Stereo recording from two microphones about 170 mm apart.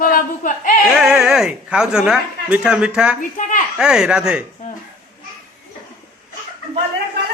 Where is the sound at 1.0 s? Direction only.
5° right (ahead or behind).